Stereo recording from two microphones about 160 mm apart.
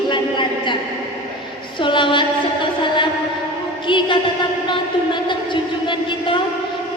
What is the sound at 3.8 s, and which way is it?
Music, 30° left (ahead or behind).